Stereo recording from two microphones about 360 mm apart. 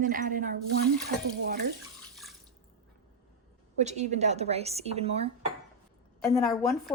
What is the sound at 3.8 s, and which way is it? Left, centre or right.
A woman's voice, centre.